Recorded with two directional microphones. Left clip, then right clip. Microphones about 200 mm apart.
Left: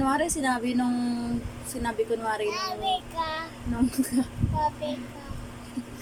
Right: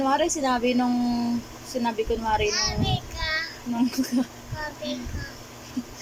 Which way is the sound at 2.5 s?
20° left (ahead or behind).